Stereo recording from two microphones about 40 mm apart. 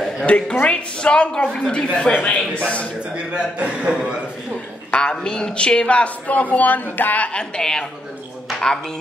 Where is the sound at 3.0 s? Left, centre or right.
Right.